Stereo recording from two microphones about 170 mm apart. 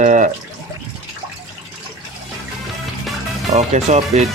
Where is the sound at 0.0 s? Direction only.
50° right (ahead or behind).